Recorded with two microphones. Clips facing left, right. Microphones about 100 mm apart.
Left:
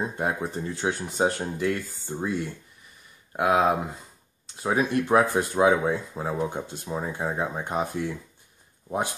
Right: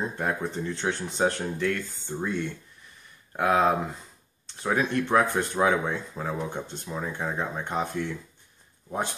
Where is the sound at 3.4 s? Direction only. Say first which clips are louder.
Left 1 dB; 10° left (ahead or behind).